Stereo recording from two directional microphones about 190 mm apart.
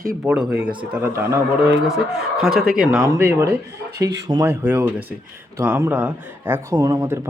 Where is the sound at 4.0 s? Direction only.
60° right (ahead or behind).